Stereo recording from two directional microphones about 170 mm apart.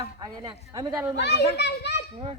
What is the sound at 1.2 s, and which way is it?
Speech, 80° left.